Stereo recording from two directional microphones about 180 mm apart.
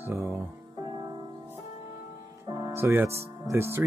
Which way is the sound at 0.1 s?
15° right (ahead or behind).